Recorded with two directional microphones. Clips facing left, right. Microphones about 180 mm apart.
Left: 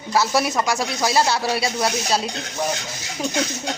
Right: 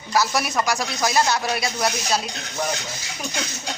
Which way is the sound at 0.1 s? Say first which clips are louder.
Left 2 dB; 25° left (ahead or behind).